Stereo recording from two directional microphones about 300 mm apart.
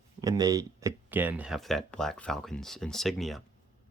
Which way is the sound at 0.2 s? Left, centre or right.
Centre.